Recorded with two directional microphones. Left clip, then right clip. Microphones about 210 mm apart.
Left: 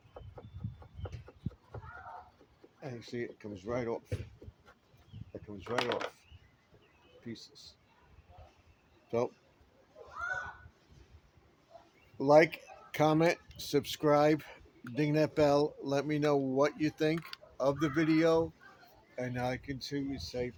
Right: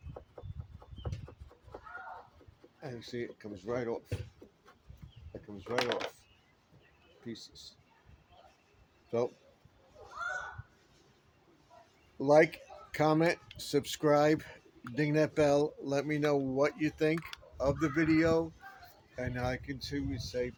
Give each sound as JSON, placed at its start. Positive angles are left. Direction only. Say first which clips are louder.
{"t": 2.8, "sound": "speech", "louder": "even", "side_deg": 15}
{"t": 5.7, "sound": "speech", "louder": "right 1 dB", "side_deg": -10}
{"t": 7.3, "sound": "speech", "louder": "right 2 dB", "side_deg": 10}
{"t": 9.0, "sound": "a man's voice", "louder": "even", "side_deg": 20}
{"t": 12.1, "sound": "speech", "louder": "left 1 dB", "side_deg": 20}